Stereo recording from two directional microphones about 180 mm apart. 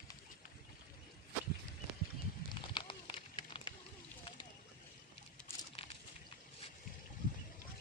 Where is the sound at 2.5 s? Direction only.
25° left (ahead or behind).